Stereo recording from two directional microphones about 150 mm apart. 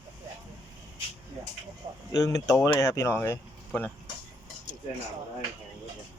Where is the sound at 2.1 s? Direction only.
20° left (ahead or behind).